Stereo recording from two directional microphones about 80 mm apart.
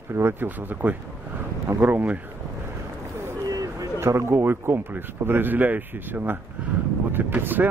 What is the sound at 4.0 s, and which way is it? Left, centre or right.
Speech, right.